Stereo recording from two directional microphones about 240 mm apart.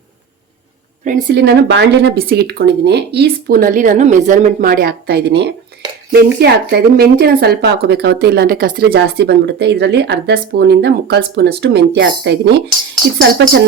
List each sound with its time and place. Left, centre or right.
1.0 s speech: right